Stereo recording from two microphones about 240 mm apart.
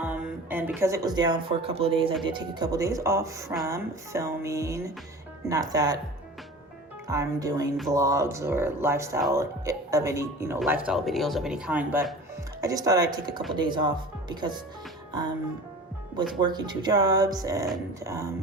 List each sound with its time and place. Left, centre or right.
0.0 s speech: centre
7.1 s speech: centre
16.4 s speech: centre